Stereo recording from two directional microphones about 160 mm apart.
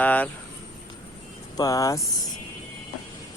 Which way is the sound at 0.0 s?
10° left (ahead or behind).